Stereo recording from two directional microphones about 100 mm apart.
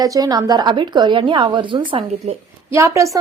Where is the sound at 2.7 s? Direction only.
30° right (ahead or behind).